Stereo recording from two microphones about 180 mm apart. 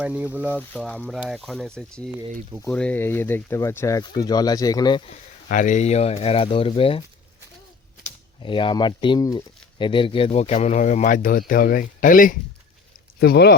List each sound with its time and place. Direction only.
0.0 s speech: 10° right (ahead or behind)
0.7 s speech: 5° left (ahead or behind); by 5.1 s 25° left (ahead or behind)
5.5 s speech: 45° left (ahead or behind); by 7.0 s 30° left (ahead or behind)
8.4 s speech: 25° left (ahead or behind); by 12.4 s 50° left (ahead or behind)
13.1 s speech: 65° left (ahead or behind)